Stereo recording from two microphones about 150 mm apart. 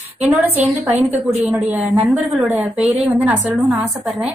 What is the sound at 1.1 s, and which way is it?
A woman's voice, 15° right (ahead or behind).